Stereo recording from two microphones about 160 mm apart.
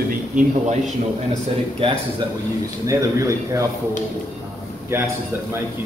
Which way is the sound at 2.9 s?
20° right (ahead or behind).